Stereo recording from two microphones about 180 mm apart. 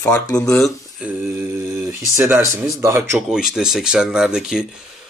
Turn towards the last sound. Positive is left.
turn(degrees=-5)  # may be behind; listen again after turning